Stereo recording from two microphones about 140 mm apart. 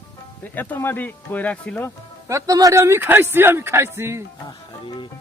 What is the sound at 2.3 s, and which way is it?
A man's voice, 25° right (ahead or behind).